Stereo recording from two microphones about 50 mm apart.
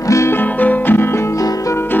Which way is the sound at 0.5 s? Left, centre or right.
Left.